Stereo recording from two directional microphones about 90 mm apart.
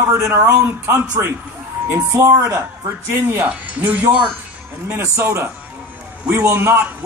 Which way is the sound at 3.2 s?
20° right (ahead or behind).